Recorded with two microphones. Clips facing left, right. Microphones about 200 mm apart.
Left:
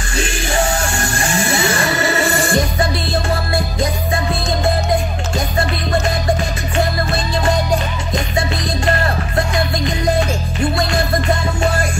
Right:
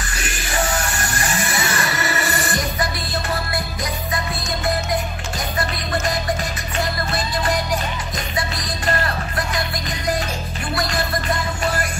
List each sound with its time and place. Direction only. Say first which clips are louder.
0.2 s music: left 6 dB; 25° left (ahead or behind)